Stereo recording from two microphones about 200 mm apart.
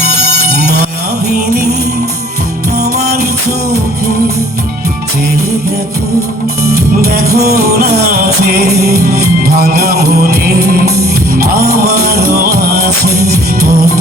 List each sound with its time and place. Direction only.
2.7 s music: 50° right (ahead or behind)
6.7 s music: 50° right (ahead or behind)